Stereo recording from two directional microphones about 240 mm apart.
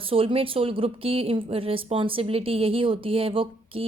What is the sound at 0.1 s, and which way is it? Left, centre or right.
Speech, right.